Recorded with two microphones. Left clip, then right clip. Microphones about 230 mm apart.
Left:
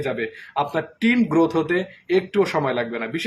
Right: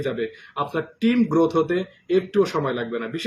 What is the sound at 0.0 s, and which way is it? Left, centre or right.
Speech, centre.